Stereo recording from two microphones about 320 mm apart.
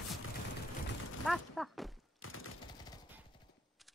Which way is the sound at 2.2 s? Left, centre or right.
Left.